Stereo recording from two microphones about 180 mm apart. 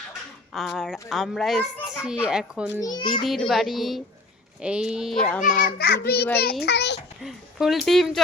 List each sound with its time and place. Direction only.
0.5 s a child's voice: centre (ahead or behind)
2.8 s a child's voice: 25° left (ahead or behind)
3.2 s a child's voice: centre (ahead or behind)
5.4 s a child's voice: 45° left (ahead or behind); by 7.0 s 70° left (ahead or behind)
7.2 s a child's voice: centre (ahead or behind)